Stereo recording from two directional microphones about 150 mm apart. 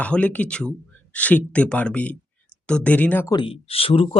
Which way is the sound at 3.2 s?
30° left (ahead or behind).